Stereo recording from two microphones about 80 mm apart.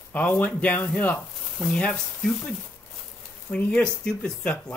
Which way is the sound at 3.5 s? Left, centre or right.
Centre.